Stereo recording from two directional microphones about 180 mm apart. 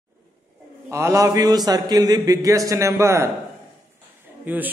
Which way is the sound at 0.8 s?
15° right (ahead or behind).